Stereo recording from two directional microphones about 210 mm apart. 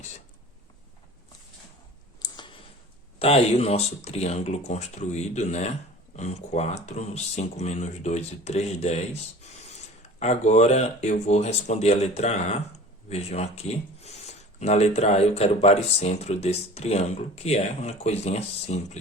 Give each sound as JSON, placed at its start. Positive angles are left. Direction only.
{"t": 2.2, "sound": "a sound", "side_deg": 20}
{"t": 3.2, "sound": "speech", "side_deg": 30}
{"t": 10.2, "sound": "speech", "side_deg": 35}